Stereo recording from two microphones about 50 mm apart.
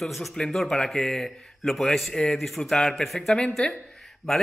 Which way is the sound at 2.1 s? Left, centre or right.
Centre.